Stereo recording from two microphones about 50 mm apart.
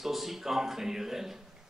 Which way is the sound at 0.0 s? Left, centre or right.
Centre.